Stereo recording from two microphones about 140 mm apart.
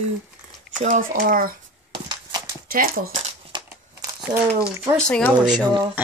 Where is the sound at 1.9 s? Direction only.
30° right (ahead or behind).